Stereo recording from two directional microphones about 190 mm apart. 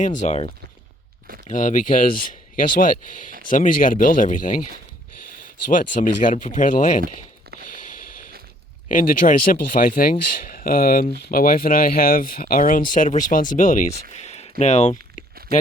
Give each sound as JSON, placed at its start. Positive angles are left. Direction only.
{"t": 0.0, "sound": "speech", "side_deg": 40}
{"t": 1.5, "sound": "speech", "side_deg": 40}
{"t": 5.7, "sound": "speech", "side_deg": 45}
{"t": 7.6, "sound": "a sound", "side_deg": 45}
{"t": 8.9, "sound": "speech", "side_deg": 45}
{"t": 14.1, "sound": "a sound", "side_deg": 35}
{"t": 14.6, "sound": "speech", "side_deg": 35}